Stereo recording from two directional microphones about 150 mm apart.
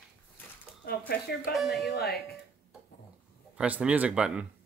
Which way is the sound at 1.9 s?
90° left.